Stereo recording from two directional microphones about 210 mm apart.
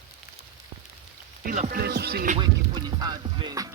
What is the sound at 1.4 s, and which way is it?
Music, 40° right (ahead or behind).